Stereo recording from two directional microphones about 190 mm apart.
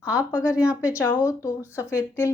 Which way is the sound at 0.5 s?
5° right (ahead or behind).